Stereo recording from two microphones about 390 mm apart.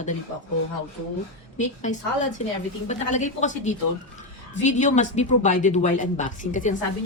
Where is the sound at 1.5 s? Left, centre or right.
Centre.